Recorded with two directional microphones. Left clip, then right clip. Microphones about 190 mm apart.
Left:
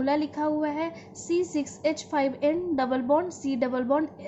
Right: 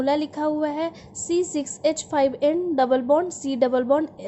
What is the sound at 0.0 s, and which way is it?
A woman's voice, 45° right (ahead or behind).